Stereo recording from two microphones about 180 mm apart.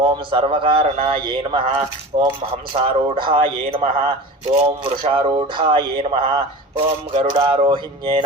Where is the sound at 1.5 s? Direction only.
25° right (ahead or behind).